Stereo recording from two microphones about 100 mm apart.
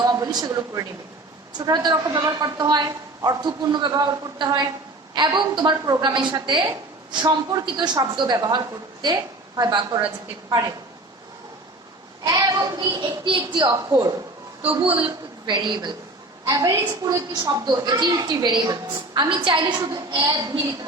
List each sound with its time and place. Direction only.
0.0 s a woman's voice: 40° right (ahead or behind)
12.2 s a man's voice: 40° right (ahead or behind)
14.6 s a woman's voice: 75° right (ahead or behind); by 15.9 s 50° right (ahead or behind)
16.5 s a woman's voice: 35° right (ahead or behind)
17.7 s a man's voice: 45° right (ahead or behind)